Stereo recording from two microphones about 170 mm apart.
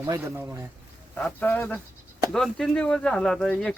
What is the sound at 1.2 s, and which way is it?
Speech, 5° left (ahead or behind).